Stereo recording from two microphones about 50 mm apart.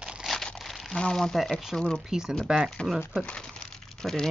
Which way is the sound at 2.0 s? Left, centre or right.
Centre.